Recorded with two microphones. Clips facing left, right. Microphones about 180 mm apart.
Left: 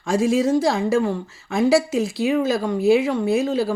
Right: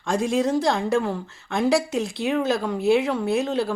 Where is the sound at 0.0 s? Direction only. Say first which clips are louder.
Left 3 dB; 5° left (ahead or behind).